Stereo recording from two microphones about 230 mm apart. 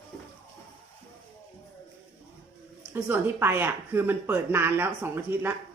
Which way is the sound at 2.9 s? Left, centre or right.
Centre.